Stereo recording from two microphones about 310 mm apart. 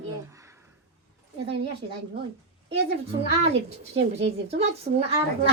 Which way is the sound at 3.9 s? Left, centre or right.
Right.